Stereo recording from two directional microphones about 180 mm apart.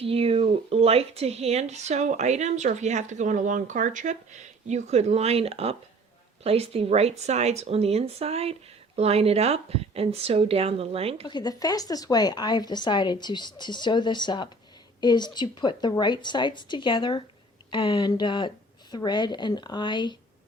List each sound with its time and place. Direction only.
0.0 s speech: 35° right (ahead or behind)
11.3 s speech: 25° left (ahead or behind)